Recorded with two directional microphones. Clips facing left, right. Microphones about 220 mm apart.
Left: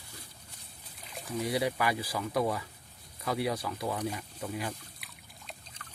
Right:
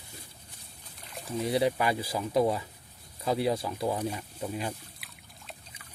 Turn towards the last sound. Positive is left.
turn(degrees=-5)  # may be behind; listen again after turning